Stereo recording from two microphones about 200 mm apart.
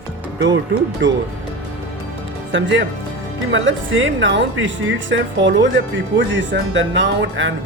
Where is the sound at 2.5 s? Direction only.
65° right (ahead or behind).